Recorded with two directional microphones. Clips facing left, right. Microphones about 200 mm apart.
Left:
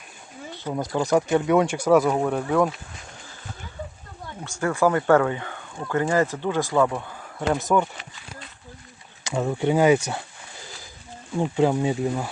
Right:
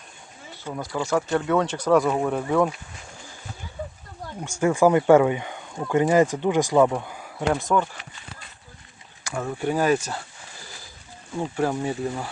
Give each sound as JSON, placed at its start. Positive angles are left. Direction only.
{"t": 0.6, "sound": "speech", "side_deg": 20}
{"t": 4.4, "sound": "speech", "side_deg": -15}
{"t": 7.5, "sound": "speech", "side_deg": 5}
{"t": 9.2, "sound": "speech", "side_deg": 20}
{"t": 11.3, "sound": "speech", "side_deg": 15}